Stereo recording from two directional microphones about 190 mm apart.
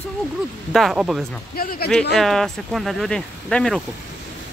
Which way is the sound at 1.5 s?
50° left (ahead or behind).